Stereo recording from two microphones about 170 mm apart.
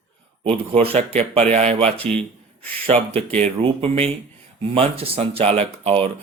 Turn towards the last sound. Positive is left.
turn(degrees=-35)  # may be behind; listen again after turning